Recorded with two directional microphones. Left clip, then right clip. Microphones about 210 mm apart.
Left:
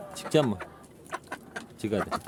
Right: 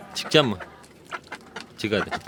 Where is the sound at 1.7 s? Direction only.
5° left (ahead or behind).